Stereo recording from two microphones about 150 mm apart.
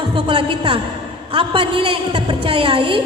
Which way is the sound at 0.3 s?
35° right (ahead or behind).